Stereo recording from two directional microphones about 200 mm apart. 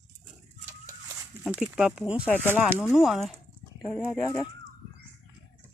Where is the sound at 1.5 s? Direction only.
5° right (ahead or behind).